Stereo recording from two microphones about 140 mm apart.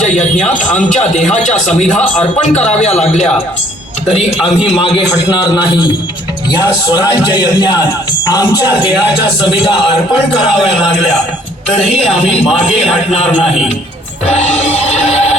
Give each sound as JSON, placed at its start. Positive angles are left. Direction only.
{"t": 0.0, "sound": "a man's voice", "side_deg": 60}
{"t": 4.6, "sound": "a man's voice", "side_deg": 40}
{"t": 8.6, "sound": "speech", "side_deg": -10}
{"t": 11.7, "sound": "music", "side_deg": 50}